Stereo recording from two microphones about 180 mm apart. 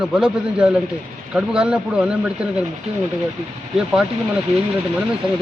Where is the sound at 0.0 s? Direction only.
5° right (ahead or behind).